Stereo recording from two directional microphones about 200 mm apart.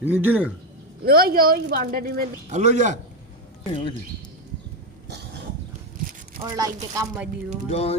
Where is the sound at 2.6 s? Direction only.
35° right (ahead or behind).